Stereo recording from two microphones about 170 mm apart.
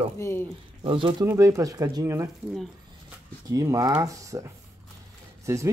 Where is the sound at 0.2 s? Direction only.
15° left (ahead or behind).